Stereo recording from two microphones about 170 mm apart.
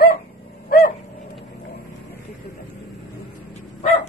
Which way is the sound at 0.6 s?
60° left (ahead or behind).